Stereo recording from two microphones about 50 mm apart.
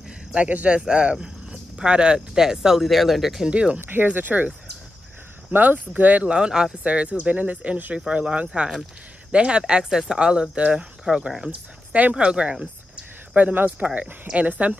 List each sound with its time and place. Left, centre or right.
0.7 s speech: centre
3.4 s speech: right
3.8 s speech: right
5.5 s speech: right
6.2 s speech: centre
6.8 s speech: right
13.3 s speech: right